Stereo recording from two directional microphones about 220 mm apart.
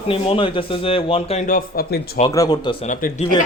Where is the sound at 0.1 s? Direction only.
25° left (ahead or behind); by 2.2 s 45° left (ahead or behind).